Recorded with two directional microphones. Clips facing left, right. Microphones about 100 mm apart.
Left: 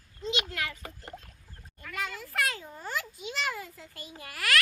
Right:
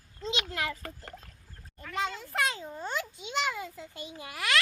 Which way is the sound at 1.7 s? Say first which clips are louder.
Right 4 dB; 30° right (ahead or behind).